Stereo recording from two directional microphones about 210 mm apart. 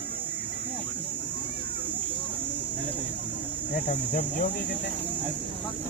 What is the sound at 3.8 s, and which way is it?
Speech, 35° left (ahead or behind).